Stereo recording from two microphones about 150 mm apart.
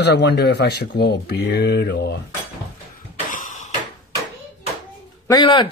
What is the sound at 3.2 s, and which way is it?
Cough, 60° left (ahead or behind).